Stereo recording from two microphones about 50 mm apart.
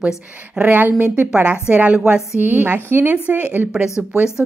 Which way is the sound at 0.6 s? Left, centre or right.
Right.